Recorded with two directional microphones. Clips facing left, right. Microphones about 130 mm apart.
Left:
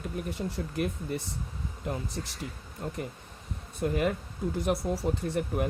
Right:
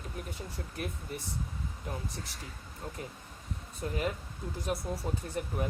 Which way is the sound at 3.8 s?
65° left (ahead or behind).